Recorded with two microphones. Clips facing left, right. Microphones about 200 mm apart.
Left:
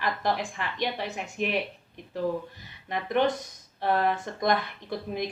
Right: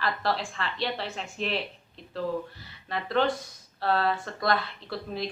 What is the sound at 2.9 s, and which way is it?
A woman's voice, 15° left (ahead or behind).